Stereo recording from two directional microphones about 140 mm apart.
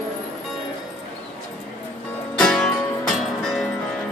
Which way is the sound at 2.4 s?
5° left (ahead or behind).